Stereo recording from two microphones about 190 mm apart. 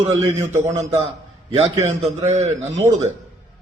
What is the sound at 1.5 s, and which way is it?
A man's voice, 35° right (ahead or behind).